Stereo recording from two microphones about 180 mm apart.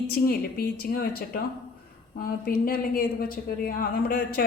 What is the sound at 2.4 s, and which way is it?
Speech, 55° left (ahead or behind).